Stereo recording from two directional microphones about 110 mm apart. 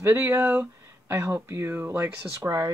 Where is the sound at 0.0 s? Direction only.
20° right (ahead or behind).